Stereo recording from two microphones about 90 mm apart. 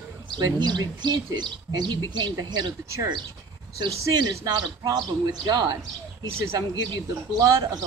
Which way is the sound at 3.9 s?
35° right (ahead or behind).